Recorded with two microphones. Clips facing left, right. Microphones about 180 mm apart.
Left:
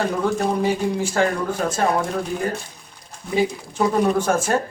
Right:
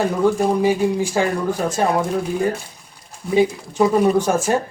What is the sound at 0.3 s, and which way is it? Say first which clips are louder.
Speech: right 4 dB; 10° right (ahead or behind).